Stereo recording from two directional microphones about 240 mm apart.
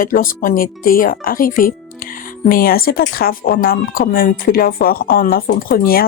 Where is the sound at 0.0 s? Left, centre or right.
Left.